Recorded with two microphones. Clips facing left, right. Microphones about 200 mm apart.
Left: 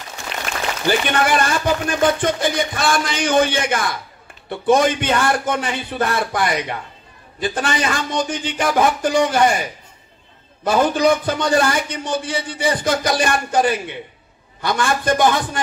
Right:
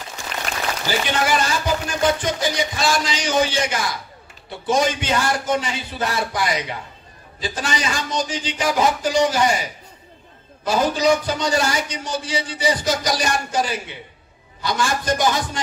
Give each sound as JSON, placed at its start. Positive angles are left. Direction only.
{"t": 0.8, "sound": "a man's voice", "side_deg": 55}
{"t": 10.6, "sound": "a man's voice", "side_deg": 55}